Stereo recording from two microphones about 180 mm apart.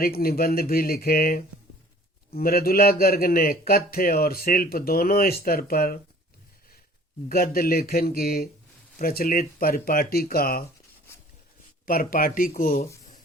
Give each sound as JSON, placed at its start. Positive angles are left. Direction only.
{"t": 0.0, "sound": "a man's voice", "side_deg": 55}
{"t": 7.3, "sound": "a man's voice", "side_deg": 55}
{"t": 11.9, "sound": "speech", "side_deg": 55}